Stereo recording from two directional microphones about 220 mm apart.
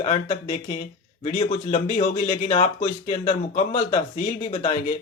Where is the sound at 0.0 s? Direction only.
30° left (ahead or behind).